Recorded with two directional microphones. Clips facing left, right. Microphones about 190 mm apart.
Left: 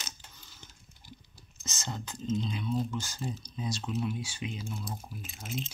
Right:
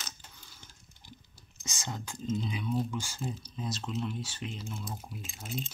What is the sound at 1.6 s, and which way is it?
Speech, 15° right (ahead or behind).